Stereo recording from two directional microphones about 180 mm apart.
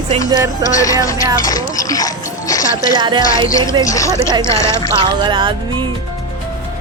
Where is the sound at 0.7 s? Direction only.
20° left (ahead or behind).